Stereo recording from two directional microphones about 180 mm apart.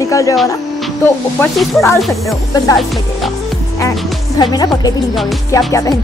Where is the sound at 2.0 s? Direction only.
Centre (ahead or behind).